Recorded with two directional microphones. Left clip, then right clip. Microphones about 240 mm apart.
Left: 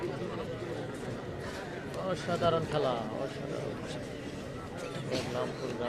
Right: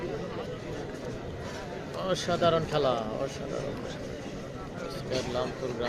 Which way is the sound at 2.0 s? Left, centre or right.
Right.